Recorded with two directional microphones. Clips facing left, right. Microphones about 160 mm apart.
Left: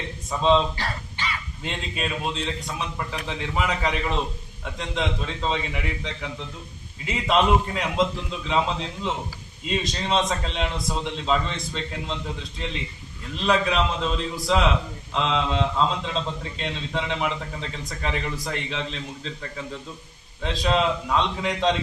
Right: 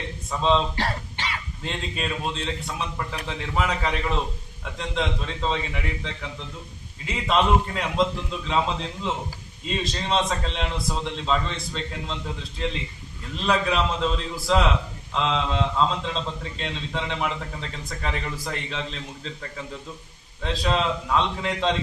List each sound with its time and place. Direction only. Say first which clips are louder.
0.3 s a man's voice: left 2 dB; centre (ahead or behind)
0.8 s throat clearing: right 3 dB; 70° right (ahead or behind)
1.6 s a man's voice: even; centre (ahead or behind)
7.1 s a man's voice: left 1 dB; 5° left (ahead or behind)
9.6 s a man's voice: left 1 dB; centre (ahead or behind)
13.5 s a man's voice: left 1 dB; centre (ahead or behind)
20.4 s a man's voice: left 2 dB; centre (ahead or behind)